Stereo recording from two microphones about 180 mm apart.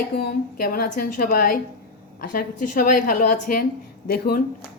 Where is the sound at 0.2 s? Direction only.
60° left (ahead or behind).